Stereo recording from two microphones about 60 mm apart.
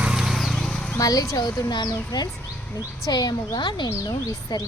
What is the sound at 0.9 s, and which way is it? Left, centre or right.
Speech, left.